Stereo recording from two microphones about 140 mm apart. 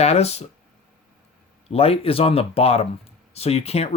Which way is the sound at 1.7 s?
45° left (ahead or behind).